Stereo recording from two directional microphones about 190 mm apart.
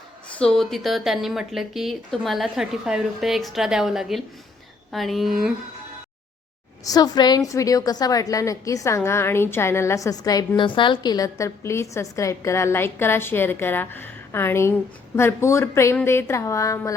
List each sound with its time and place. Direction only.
0.3 s speech: 5° left (ahead or behind)
6.8 s a woman's voice: 20° left (ahead or behind)